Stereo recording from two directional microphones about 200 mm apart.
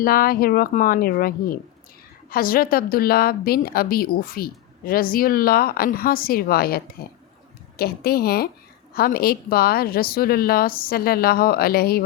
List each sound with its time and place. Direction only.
0.0 s a woman's voice: 45° left (ahead or behind)